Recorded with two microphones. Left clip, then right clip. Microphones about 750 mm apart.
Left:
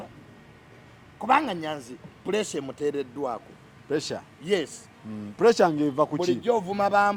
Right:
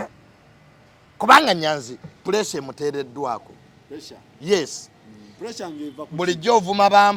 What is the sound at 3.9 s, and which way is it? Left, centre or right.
Speech, left.